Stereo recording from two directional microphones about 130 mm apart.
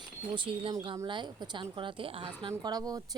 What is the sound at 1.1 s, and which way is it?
A woman's voice, 35° right (ahead or behind).